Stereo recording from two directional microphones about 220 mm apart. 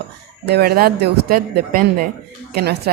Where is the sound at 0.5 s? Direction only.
45° right (ahead or behind).